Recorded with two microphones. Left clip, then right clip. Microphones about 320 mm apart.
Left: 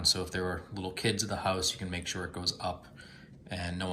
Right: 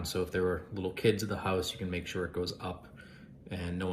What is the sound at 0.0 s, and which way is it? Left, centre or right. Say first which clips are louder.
Speech: left 2 dB; centre.